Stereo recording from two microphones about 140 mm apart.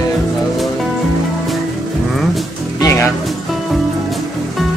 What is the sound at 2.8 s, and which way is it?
Music, 20° left (ahead or behind).